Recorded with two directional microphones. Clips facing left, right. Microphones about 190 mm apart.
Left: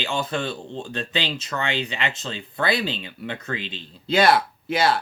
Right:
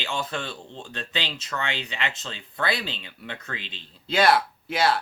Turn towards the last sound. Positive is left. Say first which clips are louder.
# left 2 dB
turn(degrees=-5)  # may be behind; listen again after turning